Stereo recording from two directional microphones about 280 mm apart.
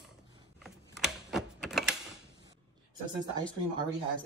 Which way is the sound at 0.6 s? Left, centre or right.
Centre.